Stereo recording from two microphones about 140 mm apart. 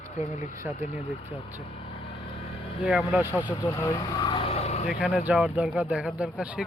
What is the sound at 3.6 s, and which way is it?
Speech, 20° left (ahead or behind).